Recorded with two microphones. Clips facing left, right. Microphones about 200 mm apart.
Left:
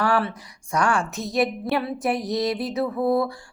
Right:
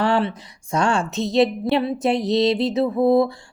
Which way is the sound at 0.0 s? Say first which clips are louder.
Right 3 dB; 25° right (ahead or behind).